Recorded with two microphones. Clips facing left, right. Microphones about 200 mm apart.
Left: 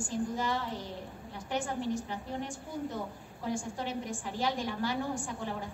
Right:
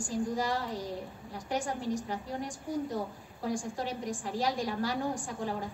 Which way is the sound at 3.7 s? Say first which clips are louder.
Right 1 dB; 40° right (ahead or behind).